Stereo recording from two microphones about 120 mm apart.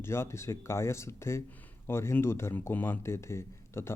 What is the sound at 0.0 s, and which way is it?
Speech, 20° left (ahead or behind).